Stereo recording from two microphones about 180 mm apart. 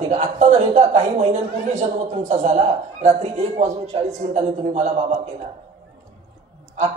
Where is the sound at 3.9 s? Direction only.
35° right (ahead or behind).